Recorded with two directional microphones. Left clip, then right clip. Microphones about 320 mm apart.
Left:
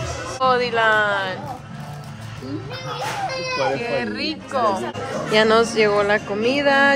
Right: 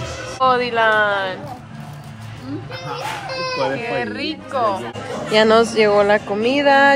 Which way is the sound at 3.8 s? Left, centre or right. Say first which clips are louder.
Right 1 dB; centre.